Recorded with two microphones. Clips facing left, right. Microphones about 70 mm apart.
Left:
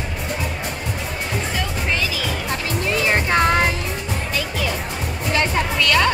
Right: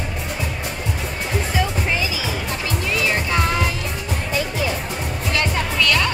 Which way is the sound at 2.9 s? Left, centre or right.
Left.